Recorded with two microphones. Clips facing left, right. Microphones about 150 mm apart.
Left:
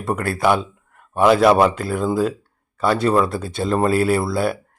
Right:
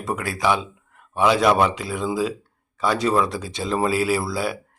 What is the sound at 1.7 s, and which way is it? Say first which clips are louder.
Speech: left 5 dB; 55° left (ahead or behind).